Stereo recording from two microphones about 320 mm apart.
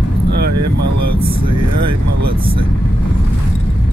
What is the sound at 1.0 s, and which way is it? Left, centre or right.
Vehicle, right.